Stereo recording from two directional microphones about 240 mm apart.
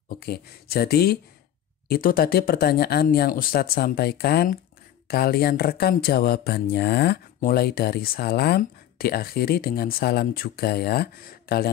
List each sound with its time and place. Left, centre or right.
0.1 s speech: left